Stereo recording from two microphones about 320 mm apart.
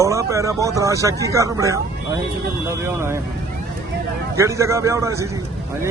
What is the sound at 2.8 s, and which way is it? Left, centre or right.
Speech, centre.